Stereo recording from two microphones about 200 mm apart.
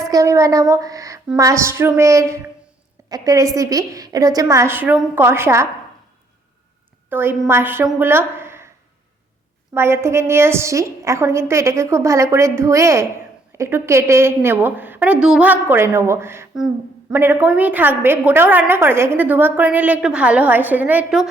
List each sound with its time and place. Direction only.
0.0 s a woman's voice: 15° right (ahead or behind)
7.1 s a woman's voice: 10° right (ahead or behind)
9.7 s a woman's voice: 10° right (ahead or behind)